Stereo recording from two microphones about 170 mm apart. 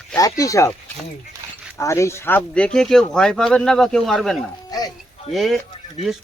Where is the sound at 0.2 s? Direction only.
20° left (ahead or behind).